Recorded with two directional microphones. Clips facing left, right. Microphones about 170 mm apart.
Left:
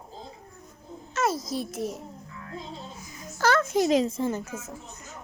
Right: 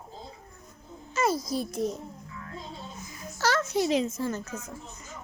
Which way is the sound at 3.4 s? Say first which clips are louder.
Left 3 dB; 50° left (ahead or behind).